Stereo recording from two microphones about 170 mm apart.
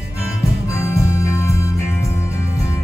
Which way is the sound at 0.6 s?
15° left (ahead or behind).